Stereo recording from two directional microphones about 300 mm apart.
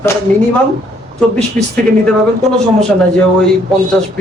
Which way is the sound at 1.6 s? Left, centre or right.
Right.